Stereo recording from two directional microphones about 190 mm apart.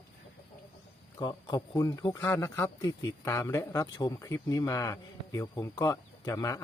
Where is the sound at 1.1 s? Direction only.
20° left (ahead or behind).